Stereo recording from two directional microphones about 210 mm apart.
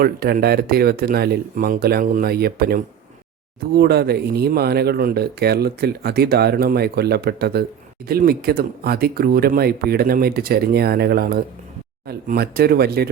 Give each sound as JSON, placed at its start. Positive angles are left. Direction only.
{"t": 0.0, "sound": "speech", "side_deg": -45}